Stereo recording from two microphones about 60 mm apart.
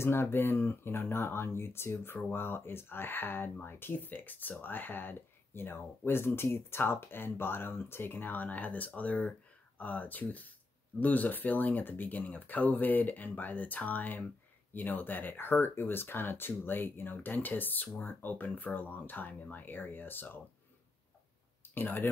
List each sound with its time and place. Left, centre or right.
0.0 s speech: left
21.6 s speech: left